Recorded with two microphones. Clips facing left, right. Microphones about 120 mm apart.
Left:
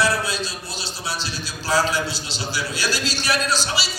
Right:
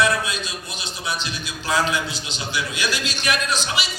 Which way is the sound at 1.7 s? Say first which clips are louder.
Left 1 dB; 35° left (ahead or behind).